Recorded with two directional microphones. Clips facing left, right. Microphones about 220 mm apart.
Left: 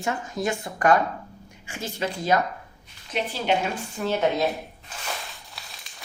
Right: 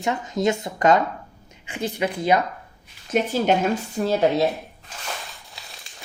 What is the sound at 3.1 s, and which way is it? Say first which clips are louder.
A woman's voice: right 5 dB; 45° right (ahead or behind).